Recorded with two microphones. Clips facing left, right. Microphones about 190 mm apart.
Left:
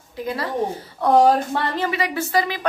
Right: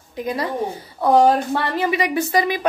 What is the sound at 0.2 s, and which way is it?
Speech, 15° right (ahead or behind).